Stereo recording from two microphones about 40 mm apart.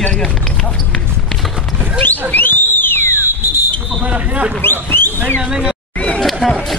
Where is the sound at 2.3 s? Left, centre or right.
Left.